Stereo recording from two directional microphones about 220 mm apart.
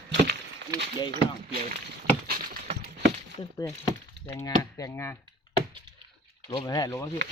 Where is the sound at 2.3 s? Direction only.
40° right (ahead or behind).